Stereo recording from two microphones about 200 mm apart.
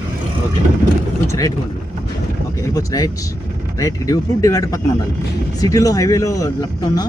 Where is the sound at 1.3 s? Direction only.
15° left (ahead or behind).